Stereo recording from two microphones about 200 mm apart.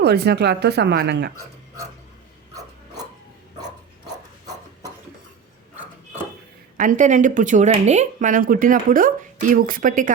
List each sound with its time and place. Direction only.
0.0 s speech: 55° right (ahead or behind)
6.7 s speech: 40° right (ahead or behind)